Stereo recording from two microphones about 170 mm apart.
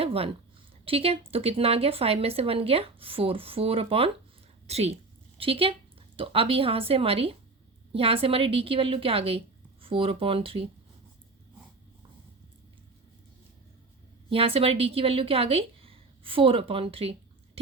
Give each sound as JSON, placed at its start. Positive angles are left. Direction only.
{"t": 0.0, "sound": "a woman's voice", "side_deg": -35}
{"t": 14.3, "sound": "a woman's voice", "side_deg": -35}